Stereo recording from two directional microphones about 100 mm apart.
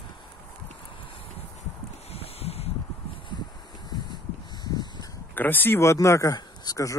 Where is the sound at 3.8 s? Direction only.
45° left (ahead or behind).